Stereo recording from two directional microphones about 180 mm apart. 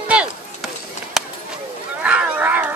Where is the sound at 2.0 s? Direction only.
10° right (ahead or behind).